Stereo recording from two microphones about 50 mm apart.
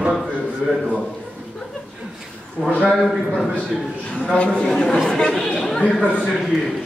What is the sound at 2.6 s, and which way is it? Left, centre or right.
Speech, left.